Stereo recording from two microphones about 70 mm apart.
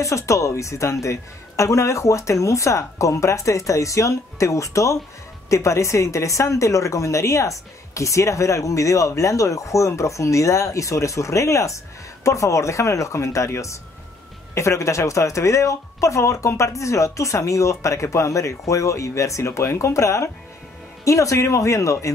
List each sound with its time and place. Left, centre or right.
0.0 s a woman's voice: left